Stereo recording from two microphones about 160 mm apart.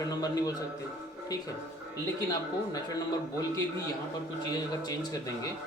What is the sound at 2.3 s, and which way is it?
Speech, 25° left (ahead or behind).